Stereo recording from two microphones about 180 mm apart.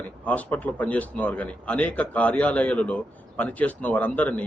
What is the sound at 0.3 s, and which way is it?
A man's voice, 10° left (ahead or behind).